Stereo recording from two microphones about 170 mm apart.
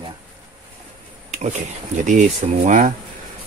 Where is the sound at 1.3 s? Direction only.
45° right (ahead or behind).